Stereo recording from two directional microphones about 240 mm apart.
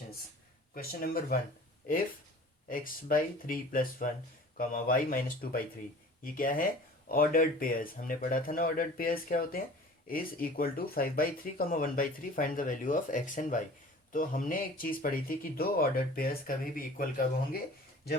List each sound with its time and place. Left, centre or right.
0.7 s speech: left
2.6 s speech: left